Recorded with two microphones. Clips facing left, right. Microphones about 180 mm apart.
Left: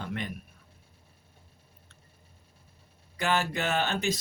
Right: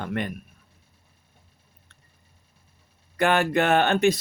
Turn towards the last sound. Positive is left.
turn(degrees=-60)  # may be behind; listen again after turning